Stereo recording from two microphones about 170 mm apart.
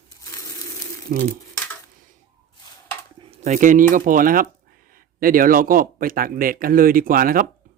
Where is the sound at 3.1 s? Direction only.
40° right (ahead or behind).